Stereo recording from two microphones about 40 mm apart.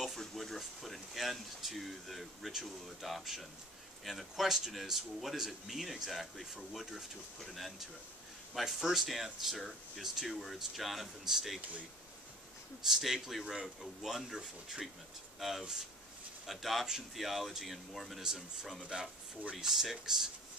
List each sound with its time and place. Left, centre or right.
0.2 s speech: centre
8.8 s speech: centre
12.8 s a man's voice: centre
18.9 s speech: right
19.6 s a man's voice: centre